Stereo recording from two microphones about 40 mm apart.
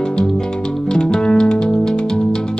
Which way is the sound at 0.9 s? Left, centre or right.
Centre.